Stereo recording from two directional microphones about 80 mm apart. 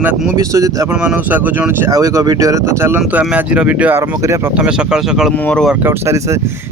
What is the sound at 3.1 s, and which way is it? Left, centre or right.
Speech, centre.